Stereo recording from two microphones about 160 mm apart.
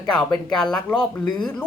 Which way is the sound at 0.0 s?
25° left (ahead or behind).